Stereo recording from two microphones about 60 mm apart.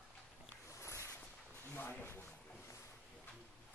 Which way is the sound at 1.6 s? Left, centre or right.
Left.